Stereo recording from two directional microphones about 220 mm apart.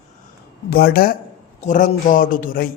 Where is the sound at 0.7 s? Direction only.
45° left (ahead or behind).